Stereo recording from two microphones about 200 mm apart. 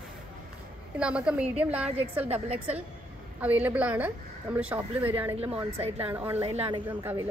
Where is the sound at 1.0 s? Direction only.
5° right (ahead or behind).